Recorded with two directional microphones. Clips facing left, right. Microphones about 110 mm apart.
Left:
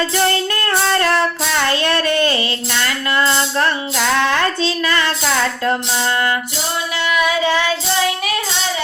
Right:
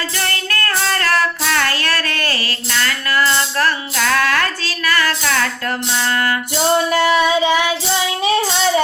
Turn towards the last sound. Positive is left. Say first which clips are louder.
# right 2 dB
turn(degrees=-15)  # may be behind; listen again after turning